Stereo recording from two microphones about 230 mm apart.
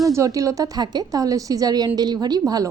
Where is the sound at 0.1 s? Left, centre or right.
Centre.